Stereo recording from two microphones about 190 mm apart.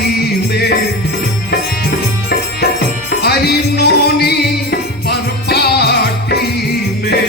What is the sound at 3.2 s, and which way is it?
Music, 60° left (ahead or behind).